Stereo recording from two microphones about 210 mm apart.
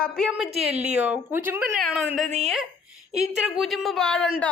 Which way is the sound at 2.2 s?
35° right (ahead or behind).